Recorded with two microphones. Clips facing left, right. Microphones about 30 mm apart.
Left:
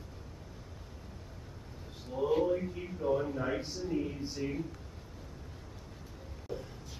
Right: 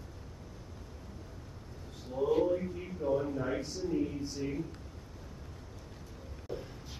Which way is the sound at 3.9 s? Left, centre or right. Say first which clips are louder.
Right 2 dB; centre.